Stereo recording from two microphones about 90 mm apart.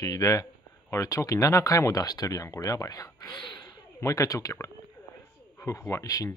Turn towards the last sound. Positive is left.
turn(degrees=40)  # may be behind; listen again after turning